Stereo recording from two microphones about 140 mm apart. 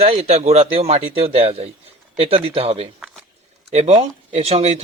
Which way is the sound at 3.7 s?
55° right (ahead or behind).